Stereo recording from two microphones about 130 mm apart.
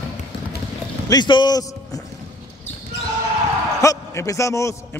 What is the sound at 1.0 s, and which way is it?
A man's voice, 35° left (ahead or behind).